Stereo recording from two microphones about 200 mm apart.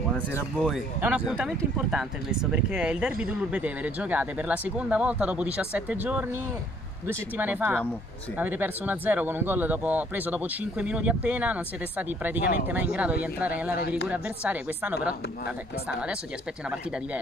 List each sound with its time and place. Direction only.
0.3 s speech: 10° left (ahead or behind)
0.7 s speech: 5° right (ahead or behind)
13.7 s speech: 50° left (ahead or behind)
14.0 s speech: 5° right (ahead or behind)